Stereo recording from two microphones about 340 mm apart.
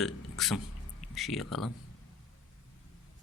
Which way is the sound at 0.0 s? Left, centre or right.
Centre.